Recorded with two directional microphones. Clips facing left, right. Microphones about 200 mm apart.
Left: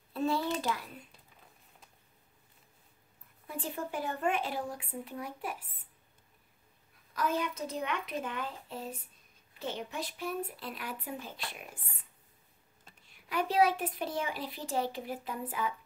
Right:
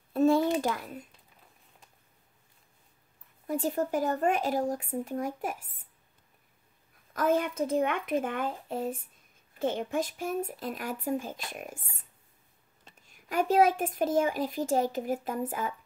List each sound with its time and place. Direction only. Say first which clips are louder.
0.1 s a sound: right 8 dB; 45° right (ahead or behind)
0.6 s speech: right 5 dB; 50° right (ahead or behind)
3.4 s speech: right 9 dB; 40° right (ahead or behind)
7.2 s speech: right 6 dB; 50° right (ahead or behind)